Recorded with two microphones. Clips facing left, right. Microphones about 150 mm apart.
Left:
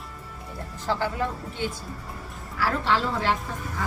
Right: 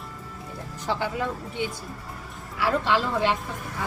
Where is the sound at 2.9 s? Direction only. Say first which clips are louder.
Right 2 dB; 15° right (ahead or behind).